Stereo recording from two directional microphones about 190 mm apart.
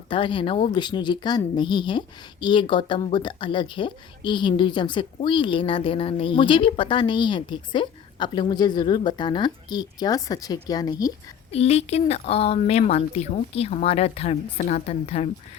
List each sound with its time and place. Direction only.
0.1 s speech: 25° left (ahead or behind)
11.5 s speech: 35° left (ahead or behind)